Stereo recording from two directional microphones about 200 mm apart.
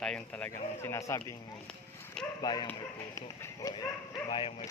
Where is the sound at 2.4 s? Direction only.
20° left (ahead or behind).